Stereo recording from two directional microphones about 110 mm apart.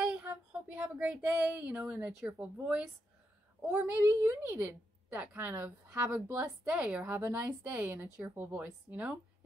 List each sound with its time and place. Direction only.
0.0 s a sound: 10° right (ahead or behind)
2.0 s a woman's voice: 10° right (ahead or behind)
4.1 s a woman's voice: 30° right (ahead or behind)
4.5 s a woman's voice: 20° right (ahead or behind)